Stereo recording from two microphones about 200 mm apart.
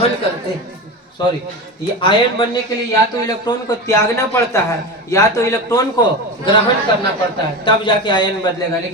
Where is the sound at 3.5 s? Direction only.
15° left (ahead or behind).